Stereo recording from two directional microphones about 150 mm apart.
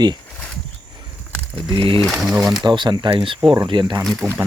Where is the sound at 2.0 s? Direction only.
Centre (ahead or behind).